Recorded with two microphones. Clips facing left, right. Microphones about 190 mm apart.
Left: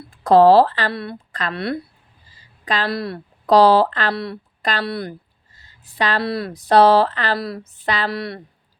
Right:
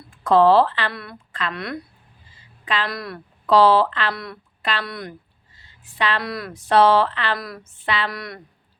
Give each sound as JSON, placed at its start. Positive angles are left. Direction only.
{"t": 0.1, "sound": "a woman's voice", "side_deg": 35}
{"t": 4.1, "sound": "a woman's voice", "side_deg": 30}